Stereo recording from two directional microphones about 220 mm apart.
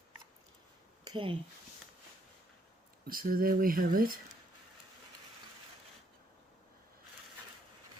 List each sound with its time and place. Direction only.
1.0 s speech: 20° right (ahead or behind)
3.1 s speech: 40° right (ahead or behind)